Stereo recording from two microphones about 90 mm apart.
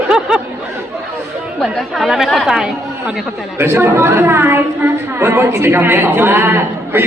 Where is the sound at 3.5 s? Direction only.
25° right (ahead or behind).